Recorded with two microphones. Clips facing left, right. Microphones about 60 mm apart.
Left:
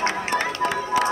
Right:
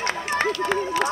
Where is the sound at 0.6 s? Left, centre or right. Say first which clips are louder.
Even; left.